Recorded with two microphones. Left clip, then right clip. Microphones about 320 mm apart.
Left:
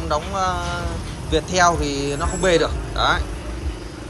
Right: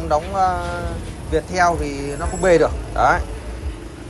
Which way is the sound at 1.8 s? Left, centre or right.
Centre.